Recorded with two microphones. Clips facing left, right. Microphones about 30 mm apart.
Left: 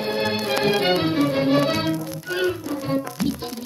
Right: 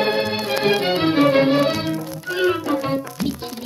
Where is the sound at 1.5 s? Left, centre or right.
Centre.